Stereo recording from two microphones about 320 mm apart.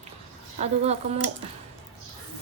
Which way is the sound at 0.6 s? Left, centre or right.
Centre.